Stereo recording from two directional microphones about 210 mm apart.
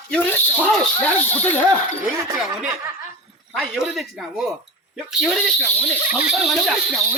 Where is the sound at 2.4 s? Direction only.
5° right (ahead or behind).